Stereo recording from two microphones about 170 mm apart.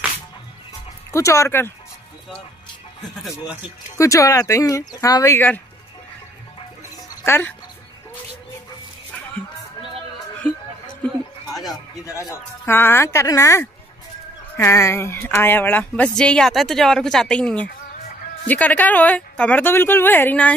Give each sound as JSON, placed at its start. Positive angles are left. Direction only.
{"t": 1.1, "sound": "speech", "side_deg": 15}
{"t": 4.0, "sound": "speech", "side_deg": 20}
{"t": 7.2, "sound": "speech", "side_deg": 10}
{"t": 12.2, "sound": "speech", "side_deg": 15}